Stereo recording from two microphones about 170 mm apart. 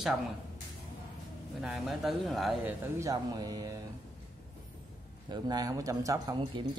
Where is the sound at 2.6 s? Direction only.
15° right (ahead or behind).